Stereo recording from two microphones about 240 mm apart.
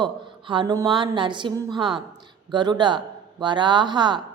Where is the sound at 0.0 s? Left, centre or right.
Centre.